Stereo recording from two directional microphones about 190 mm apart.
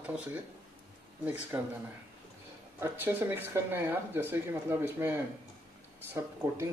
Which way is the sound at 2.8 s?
10° right (ahead or behind).